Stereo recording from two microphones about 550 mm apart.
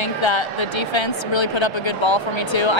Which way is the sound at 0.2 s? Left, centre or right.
Left.